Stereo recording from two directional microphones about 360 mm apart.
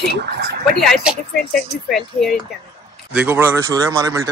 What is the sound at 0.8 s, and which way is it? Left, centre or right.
Speech, centre.